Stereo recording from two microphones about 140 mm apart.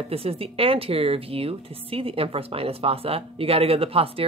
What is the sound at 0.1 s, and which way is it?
A woman's voice, 45° right (ahead or behind).